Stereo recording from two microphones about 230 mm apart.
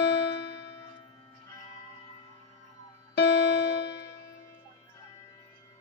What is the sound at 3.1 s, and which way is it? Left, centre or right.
Music, left.